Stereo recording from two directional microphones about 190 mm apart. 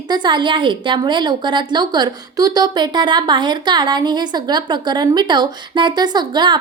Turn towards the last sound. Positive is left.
turn(degrees=-25)  # may be behind; listen again after turning